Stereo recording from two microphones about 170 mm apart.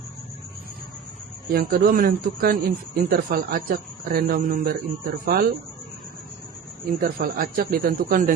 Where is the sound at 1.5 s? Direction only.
60° right (ahead or behind).